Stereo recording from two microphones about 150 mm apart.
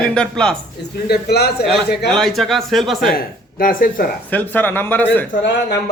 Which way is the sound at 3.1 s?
75° left (ahead or behind).